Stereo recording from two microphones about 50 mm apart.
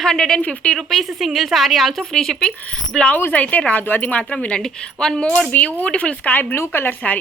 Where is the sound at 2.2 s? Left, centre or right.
Centre.